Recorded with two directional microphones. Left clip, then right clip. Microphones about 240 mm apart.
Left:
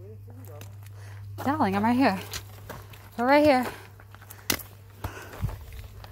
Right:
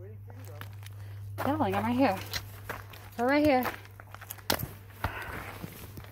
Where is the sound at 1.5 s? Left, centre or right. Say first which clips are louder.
Left 5 dB; left.